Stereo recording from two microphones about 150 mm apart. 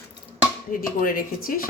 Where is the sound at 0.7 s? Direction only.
70° left (ahead or behind).